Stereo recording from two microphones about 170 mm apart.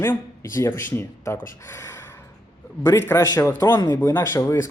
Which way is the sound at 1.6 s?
15° left (ahead or behind).